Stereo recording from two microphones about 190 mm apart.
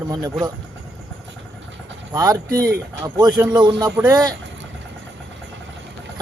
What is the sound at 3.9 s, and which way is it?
Speech, 10° right (ahead or behind).